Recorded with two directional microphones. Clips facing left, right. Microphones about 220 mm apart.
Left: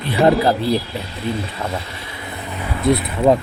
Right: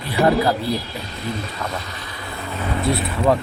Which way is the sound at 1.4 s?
30° left (ahead or behind).